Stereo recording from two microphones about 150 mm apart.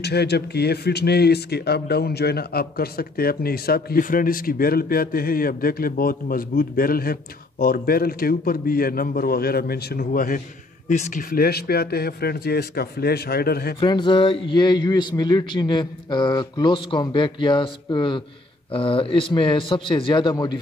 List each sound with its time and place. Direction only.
0.0 s speech: 90° left; by 10.4 s 70° left (ahead or behind)
10.9 s speech: 50° left (ahead or behind)
11.2 s a man's voice: 90° left
13.7 s speech: 30° left (ahead or behind)